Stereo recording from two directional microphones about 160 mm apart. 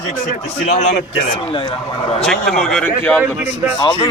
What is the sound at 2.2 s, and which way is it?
A man's voice, 5° left (ahead or behind).